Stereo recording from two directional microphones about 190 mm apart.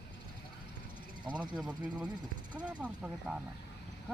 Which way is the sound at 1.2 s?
25° right (ahead or behind).